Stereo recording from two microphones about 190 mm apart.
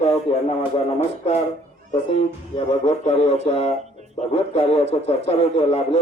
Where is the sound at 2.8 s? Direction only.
30° left (ahead or behind).